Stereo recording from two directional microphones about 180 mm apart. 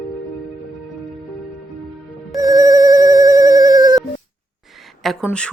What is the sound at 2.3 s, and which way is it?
Telephone bell ringing, 20° right (ahead or behind).